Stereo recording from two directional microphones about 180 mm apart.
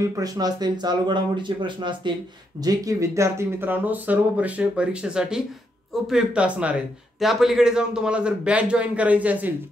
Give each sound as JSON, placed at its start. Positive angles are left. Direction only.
{"t": 0.0, "sound": "a man's voice", "side_deg": -20}